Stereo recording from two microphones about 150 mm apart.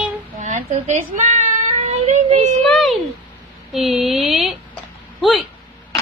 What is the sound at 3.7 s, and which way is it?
Speech, centre (ahead or behind).